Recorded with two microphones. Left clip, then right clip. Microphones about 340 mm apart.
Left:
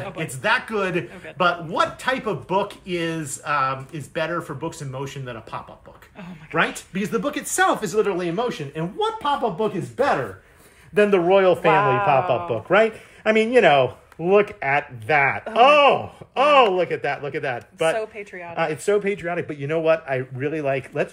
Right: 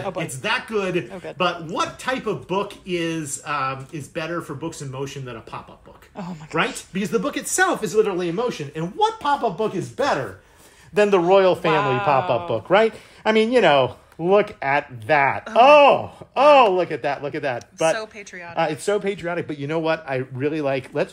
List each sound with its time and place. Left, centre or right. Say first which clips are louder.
0.0 s a man's voice: left 1 dB; centre
11.0 s speech: right 1 dB; right
11.7 s a man's voice: left 2 dB; centre
12.1 s speech: even; right
17.9 s a man's voice: left 3 dB; centre
18.5 s speech: even; right